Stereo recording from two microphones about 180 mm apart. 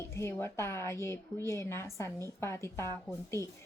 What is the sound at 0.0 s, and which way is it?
A woman's voice, 15° left (ahead or behind).